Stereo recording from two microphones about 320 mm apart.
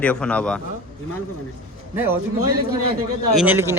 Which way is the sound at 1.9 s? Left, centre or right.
Centre.